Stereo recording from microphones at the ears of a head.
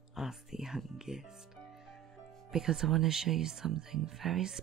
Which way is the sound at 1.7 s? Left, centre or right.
Right.